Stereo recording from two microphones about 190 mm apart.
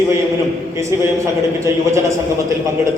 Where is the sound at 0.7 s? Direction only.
15° right (ahead or behind).